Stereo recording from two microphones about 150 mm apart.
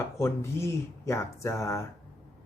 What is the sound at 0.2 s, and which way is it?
Speech, 15° left (ahead or behind).